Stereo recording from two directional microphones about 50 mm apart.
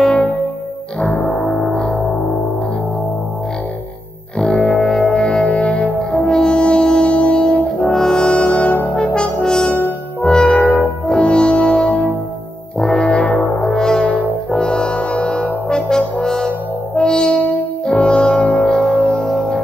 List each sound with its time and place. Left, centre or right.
0.0 s music: left
1.2 s music: centre
4.4 s music: left
6.2 s music: centre
7.8 s brass instrument: centre
10.2 s music: left
12.7 s brass instrument: centre
13.0 s brass instrument: left
13.6 s music: centre
14.0 s brass instrument: left
14.6 s music: centre